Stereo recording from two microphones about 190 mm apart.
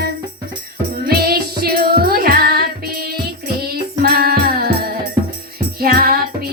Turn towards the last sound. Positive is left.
turn(degrees=-50)  # may be behind; listen again after turning